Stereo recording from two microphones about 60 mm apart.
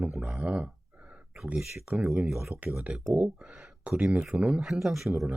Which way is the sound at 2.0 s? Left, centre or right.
Centre.